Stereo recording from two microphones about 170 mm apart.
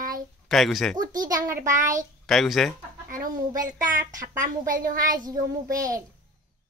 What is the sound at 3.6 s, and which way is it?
Speech, 50° right (ahead or behind).